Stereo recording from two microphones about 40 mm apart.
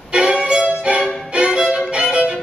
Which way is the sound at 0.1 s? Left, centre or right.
Right.